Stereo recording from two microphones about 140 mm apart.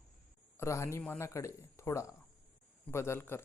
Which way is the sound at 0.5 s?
20° left (ahead or behind).